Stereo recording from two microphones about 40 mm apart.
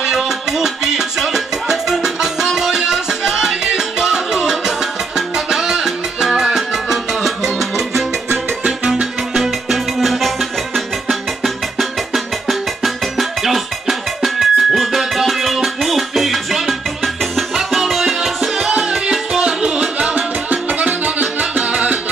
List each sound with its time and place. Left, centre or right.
0.0 s music: centre
8.6 s music: right
9.3 s music: centre
12.1 s music: centre
18.7 s music: right